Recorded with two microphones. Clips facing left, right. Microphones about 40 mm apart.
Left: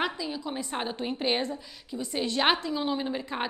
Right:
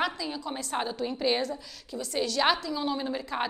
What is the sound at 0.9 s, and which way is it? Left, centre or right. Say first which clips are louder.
A woman's voice: even; left.